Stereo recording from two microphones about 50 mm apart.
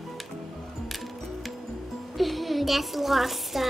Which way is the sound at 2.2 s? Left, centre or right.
Centre.